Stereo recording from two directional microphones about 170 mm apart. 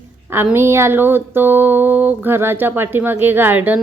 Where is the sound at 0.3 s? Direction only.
10° right (ahead or behind).